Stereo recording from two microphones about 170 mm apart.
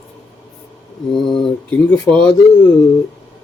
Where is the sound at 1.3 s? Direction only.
5° left (ahead or behind).